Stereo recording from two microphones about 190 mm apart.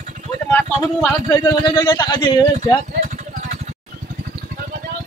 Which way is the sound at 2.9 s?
40° right (ahead or behind).